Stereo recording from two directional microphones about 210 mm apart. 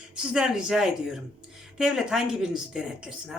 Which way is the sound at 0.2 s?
5° right (ahead or behind).